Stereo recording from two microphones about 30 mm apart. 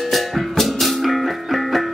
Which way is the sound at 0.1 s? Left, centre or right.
Centre.